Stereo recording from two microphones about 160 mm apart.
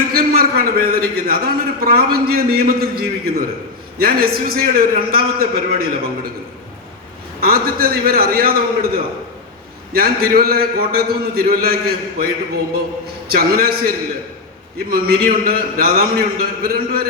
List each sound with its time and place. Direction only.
0.1 s a man's voice: 70° right (ahead or behind)
7.4 s a man's voice: 70° right (ahead or behind)
9.9 s a man's voice: 70° right (ahead or behind)
13.3 s a man's voice: 70° right (ahead or behind)